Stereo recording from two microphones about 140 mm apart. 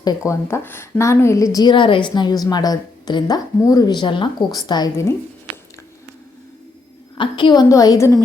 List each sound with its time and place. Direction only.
0.0 s speech: 20° left (ahead or behind)
1.5 s a woman's voice: 35° left (ahead or behind)
7.2 s speech: 35° left (ahead or behind)